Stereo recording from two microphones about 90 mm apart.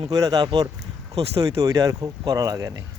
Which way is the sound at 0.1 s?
45° right (ahead or behind).